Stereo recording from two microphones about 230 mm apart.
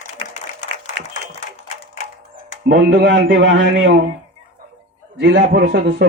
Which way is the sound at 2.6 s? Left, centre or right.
Right.